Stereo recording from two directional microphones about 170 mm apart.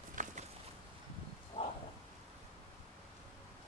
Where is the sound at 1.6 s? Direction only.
35° left (ahead or behind).